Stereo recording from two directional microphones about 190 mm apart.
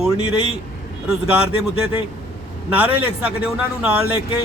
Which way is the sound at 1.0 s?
5° right (ahead or behind).